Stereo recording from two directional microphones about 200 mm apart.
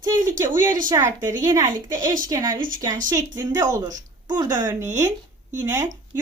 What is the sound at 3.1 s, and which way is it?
Speech, 20° right (ahead or behind).